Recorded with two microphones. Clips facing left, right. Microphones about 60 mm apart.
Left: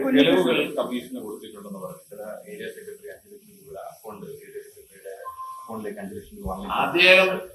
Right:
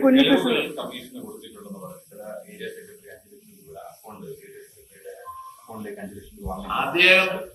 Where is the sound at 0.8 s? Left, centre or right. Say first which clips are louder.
Left 6 dB; centre.